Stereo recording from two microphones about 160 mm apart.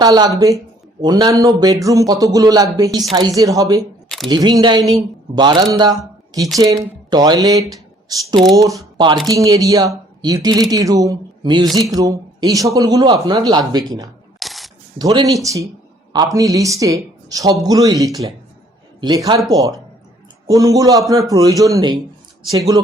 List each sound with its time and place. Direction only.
0.0 s a man's voice: 25° right (ahead or behind)
14.3 s scissors: centre (ahead or behind)
14.9 s a man's voice: 25° right (ahead or behind)